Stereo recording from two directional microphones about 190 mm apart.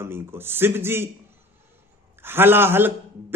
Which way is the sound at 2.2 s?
10° right (ahead or behind).